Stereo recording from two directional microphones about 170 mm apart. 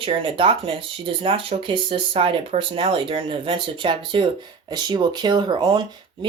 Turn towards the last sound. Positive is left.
turn(degrees=-25)  # may be behind; listen again after turning